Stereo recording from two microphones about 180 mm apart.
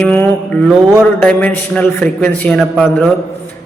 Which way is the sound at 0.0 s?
10° left (ahead or behind).